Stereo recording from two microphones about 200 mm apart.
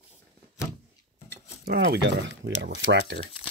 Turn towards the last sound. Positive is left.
turn(degrees=-60)  # may be behind; listen again after turning